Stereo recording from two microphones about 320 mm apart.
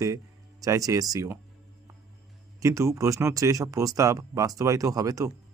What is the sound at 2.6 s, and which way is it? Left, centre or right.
Speech, centre.